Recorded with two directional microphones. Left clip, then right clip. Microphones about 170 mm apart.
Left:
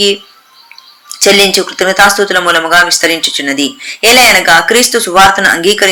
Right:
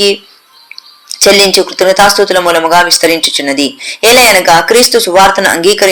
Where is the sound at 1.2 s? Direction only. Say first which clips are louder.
Right 1 dB; 20° right (ahead or behind).